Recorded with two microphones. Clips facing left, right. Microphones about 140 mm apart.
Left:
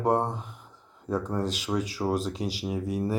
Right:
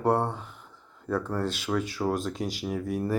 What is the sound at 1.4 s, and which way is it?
Speech, 35° left (ahead or behind).